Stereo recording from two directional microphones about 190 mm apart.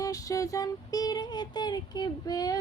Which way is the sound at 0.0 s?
15° left (ahead or behind).